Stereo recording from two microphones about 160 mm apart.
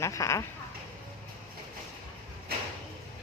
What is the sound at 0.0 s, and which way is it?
Speech, 20° left (ahead or behind).